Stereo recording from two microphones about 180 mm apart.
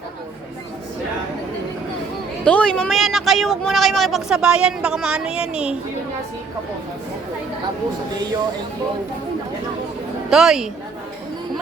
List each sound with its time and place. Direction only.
2.4 s speech: 5° left (ahead or behind)
8.1 s speech: 20° right (ahead or behind)
10.2 s speech: centre (ahead or behind)